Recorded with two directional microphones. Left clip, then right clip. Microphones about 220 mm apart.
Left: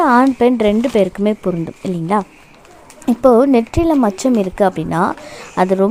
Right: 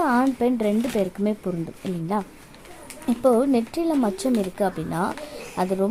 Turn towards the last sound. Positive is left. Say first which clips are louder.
# left 10 dB
turn(degrees=30)  # may be behind; listen again after turning